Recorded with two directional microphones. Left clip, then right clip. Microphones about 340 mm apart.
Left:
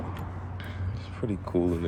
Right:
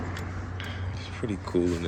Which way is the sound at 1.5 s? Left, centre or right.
Centre.